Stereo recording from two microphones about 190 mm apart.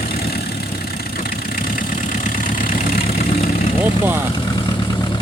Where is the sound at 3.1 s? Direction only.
30° left (ahead or behind).